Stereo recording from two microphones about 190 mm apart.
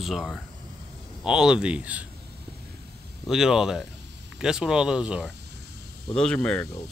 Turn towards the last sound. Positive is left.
turn(degrees=5)  # may be behind; listen again after turning